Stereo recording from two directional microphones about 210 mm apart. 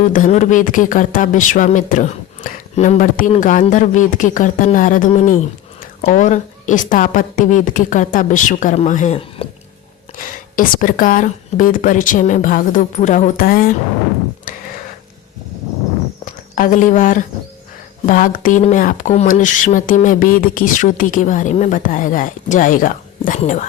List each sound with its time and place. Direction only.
0.0 s speech: 35° left (ahead or behind)
10.5 s speech: 40° left (ahead or behind)
14.5 s a sound: 40° left (ahead or behind)
16.2 s speech: 40° left (ahead or behind)